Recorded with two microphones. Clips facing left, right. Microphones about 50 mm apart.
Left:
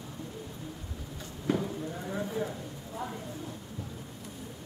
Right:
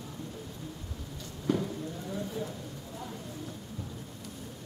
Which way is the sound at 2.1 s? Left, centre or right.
Left.